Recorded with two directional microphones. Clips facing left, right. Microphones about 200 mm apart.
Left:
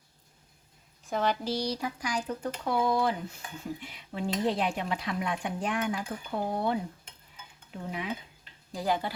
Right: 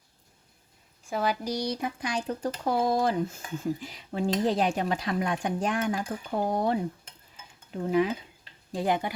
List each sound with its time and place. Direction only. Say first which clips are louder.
1.1 s speech: even; 10° right (ahead or behind); by 6.7 s 40° right (ahead or behind)
7.9 s speech: right 12 dB; 40° right (ahead or behind)
8.7 s speech: right 3 dB; 20° right (ahead or behind)